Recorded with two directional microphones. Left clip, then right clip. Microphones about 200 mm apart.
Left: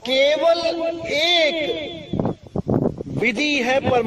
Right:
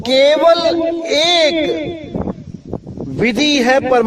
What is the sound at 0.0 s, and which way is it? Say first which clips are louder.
Music: right 7 dB; 40° right (ahead or behind).